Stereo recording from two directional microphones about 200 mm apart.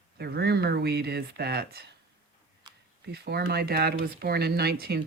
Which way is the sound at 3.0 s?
55° right (ahead or behind).